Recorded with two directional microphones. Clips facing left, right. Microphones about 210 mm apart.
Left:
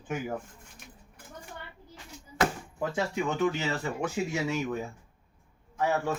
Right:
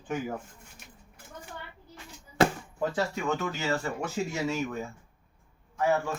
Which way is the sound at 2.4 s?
30° right (ahead or behind).